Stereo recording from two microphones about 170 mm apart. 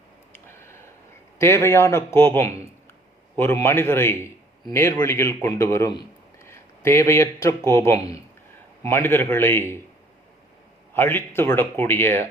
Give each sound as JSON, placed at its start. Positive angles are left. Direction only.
{"t": 0.4, "sound": "a sound", "side_deg": 15}
{"t": 1.4, "sound": "a man's voice", "side_deg": 15}
{"t": 10.9, "sound": "speech", "side_deg": 15}